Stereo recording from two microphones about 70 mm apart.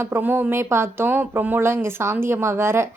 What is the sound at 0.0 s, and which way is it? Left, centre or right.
A woman's voice, right.